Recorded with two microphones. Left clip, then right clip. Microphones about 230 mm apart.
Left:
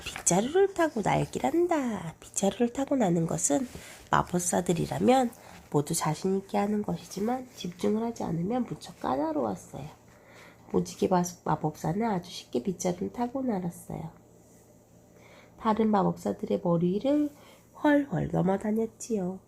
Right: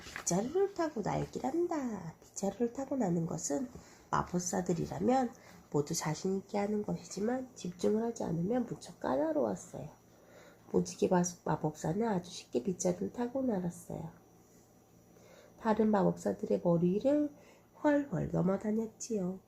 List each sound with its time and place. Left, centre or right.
0.3 s speech: left
5.7 s speech: left
6.1 s speech: left
10.7 s speech: left
15.6 s speech: left